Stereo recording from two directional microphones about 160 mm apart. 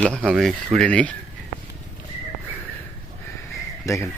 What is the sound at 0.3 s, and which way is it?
Speech, centre (ahead or behind).